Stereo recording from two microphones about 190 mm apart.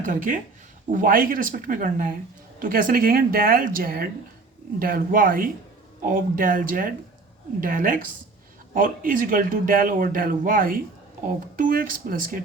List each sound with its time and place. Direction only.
0.0 s speech: 45° right (ahead or behind)